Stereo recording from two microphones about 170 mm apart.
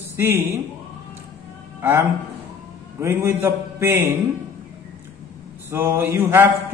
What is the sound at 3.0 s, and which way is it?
Mantra, 15° right (ahead or behind).